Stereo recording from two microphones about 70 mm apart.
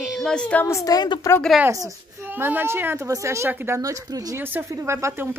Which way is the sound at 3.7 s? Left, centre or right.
Right.